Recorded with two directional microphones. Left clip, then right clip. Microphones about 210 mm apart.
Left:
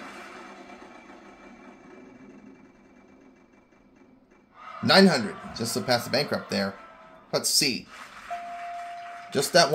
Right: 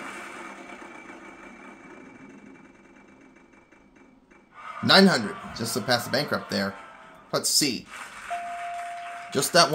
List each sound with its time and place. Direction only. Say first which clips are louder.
0.0 s a sound: right 4 dB; 30° right (ahead or behind)
4.8 s speech: right 1 dB; 5° right (ahead or behind)
8.3 s music: right 3 dB; 30° right (ahead or behind)
9.3 s speech: even; 5° right (ahead or behind)